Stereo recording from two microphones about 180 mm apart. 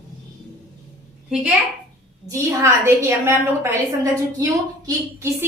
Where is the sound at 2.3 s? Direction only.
15° right (ahead or behind).